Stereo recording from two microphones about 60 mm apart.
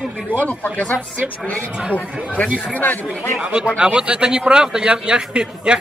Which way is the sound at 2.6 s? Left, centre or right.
Left.